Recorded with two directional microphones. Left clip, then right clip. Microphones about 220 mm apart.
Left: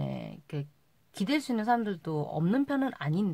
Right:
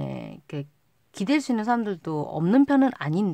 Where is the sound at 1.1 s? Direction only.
25° right (ahead or behind).